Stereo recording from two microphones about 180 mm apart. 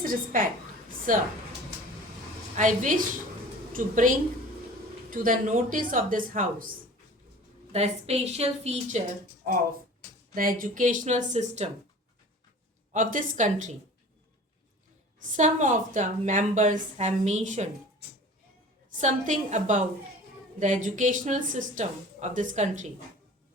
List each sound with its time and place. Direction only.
0.0 s a woman's voice: 50° right (ahead or behind)
2.6 s a woman's voice: 45° right (ahead or behind)
5.1 s a woman's voice: 50° right (ahead or behind)
7.7 s a woman's voice: 35° right (ahead or behind)
9.5 s a woman's voice: 50° right (ahead or behind)
12.9 s a woman's voice: 45° right (ahead or behind)
15.2 s a woman's voice: 45° right (ahead or behind)
18.9 s a woman's voice: 45° right (ahead or behind)